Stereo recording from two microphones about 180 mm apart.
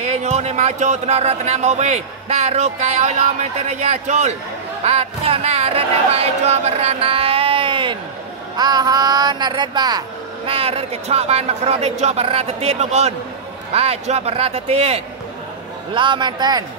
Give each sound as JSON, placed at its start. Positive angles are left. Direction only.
{"t": 0.0, "sound": "speech", "side_deg": -40}